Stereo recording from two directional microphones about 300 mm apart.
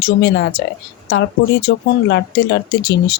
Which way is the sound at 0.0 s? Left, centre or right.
Left.